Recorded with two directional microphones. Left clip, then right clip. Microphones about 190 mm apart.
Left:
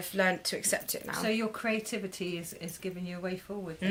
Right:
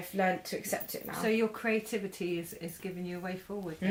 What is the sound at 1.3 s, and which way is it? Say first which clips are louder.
Speech: right 2 dB; 45° left (ahead or behind).